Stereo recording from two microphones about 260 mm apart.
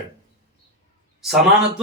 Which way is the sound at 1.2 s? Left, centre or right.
Centre.